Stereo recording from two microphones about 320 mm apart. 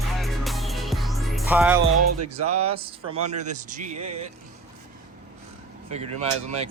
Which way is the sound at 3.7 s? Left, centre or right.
Right.